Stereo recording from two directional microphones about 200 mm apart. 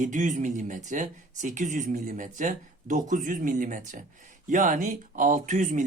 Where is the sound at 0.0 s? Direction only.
40° right (ahead or behind).